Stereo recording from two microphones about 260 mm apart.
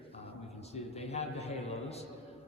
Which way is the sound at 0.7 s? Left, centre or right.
Left.